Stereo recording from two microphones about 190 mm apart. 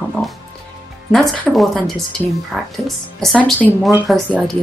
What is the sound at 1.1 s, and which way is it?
Speech, centre (ahead or behind).